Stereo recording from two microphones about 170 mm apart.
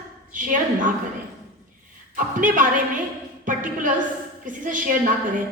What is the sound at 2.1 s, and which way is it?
Speech, 50° right (ahead or behind).